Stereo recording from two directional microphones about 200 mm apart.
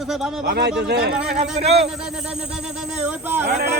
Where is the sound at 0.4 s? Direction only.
55° right (ahead or behind).